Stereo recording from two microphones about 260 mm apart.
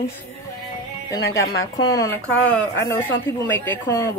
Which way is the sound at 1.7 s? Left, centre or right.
Centre.